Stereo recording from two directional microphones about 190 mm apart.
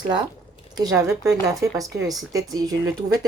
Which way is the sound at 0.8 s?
15° right (ahead or behind).